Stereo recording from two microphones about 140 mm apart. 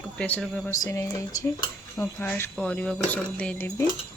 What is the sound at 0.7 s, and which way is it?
Speech, 20° left (ahead or behind).